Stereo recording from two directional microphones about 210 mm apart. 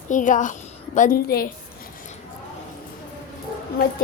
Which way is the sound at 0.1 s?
35° left (ahead or behind).